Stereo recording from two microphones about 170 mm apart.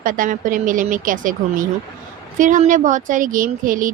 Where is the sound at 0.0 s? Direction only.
55° right (ahead or behind).